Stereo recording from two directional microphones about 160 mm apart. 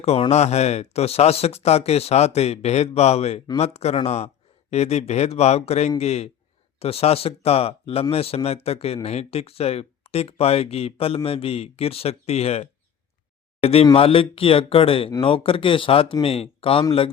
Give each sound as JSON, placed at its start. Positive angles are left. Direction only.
{"t": 0.0, "sound": "speech", "side_deg": 40}